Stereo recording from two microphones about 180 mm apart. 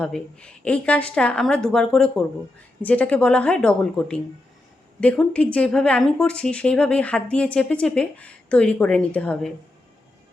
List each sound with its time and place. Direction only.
0.0 s a woman's voice: 5° left (ahead or behind)